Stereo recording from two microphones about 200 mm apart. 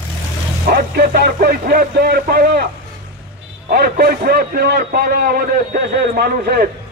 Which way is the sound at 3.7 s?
50° right (ahead or behind).